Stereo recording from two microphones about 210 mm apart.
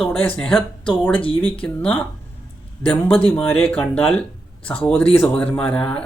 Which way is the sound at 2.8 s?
25° left (ahead or behind).